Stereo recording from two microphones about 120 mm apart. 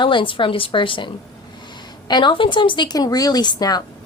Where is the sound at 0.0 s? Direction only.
45° left (ahead or behind).